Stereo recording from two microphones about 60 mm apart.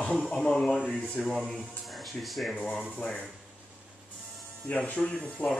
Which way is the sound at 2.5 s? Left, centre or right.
Centre.